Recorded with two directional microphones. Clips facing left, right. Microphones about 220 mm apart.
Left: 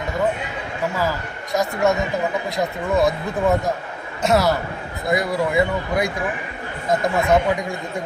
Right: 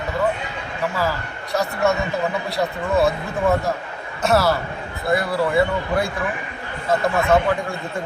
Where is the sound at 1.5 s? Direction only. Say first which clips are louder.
Left 1 dB; 15° left (ahead or behind).